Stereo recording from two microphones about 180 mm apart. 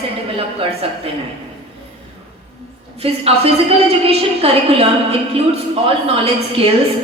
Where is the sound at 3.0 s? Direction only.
35° right (ahead or behind).